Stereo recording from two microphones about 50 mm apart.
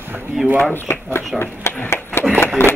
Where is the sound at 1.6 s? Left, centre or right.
Left.